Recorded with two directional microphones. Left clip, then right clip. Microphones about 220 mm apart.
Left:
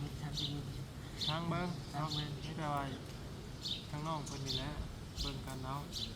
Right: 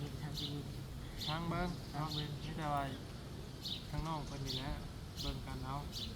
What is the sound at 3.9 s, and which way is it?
Speech, 15° right (ahead or behind).